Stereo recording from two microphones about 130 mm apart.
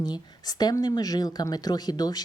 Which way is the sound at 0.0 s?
30° left (ahead or behind).